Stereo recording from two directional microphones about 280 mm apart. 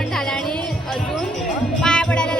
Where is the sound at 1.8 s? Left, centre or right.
Centre.